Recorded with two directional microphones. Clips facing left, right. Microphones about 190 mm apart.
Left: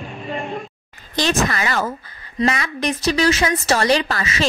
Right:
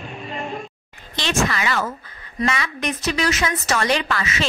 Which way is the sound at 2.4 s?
35° left (ahead or behind).